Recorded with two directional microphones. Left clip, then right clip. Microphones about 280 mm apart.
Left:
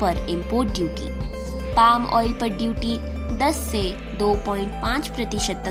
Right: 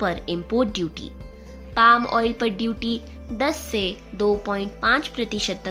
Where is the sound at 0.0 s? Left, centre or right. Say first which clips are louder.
Left 2 dB; centre.